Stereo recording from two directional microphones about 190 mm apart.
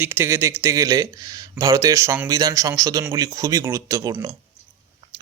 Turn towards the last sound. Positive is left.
turn(degrees=-20)  # may be behind; listen again after turning